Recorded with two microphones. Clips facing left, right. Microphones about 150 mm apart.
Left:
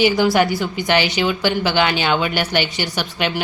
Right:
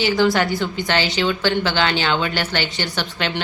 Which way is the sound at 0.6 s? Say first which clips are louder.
Left 2 dB; 15° left (ahead or behind).